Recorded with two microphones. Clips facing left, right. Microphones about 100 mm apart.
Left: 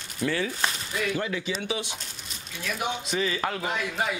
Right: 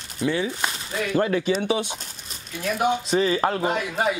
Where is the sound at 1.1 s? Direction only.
50° right (ahead or behind).